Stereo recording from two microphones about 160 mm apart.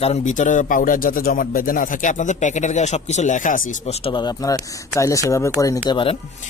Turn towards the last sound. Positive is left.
turn(degrees=35)  # may be behind; listen again after turning